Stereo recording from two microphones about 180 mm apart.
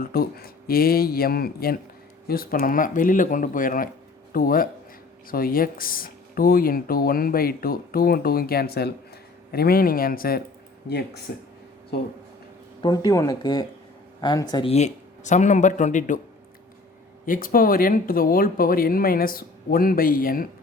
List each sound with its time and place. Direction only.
0.0 s speech: 55° left (ahead or behind)
12.8 s speech: 20° left (ahead or behind)
14.7 s speech: 40° left (ahead or behind)
17.2 s speech: 50° left (ahead or behind)